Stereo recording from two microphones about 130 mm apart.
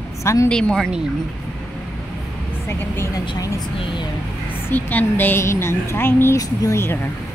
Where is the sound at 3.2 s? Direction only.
35° left (ahead or behind).